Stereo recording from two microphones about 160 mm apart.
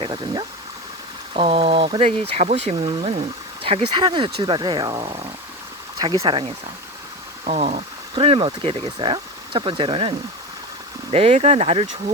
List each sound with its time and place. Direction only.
0.0 s speech: 30° right (ahead or behind)